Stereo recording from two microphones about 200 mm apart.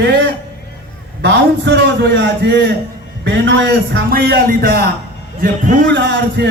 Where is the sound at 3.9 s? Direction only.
50° right (ahead or behind).